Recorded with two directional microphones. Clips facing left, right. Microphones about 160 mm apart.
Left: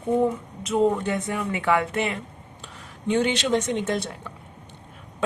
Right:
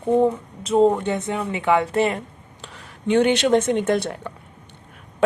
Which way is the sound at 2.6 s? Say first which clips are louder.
Right 3 dB; 70° right (ahead or behind).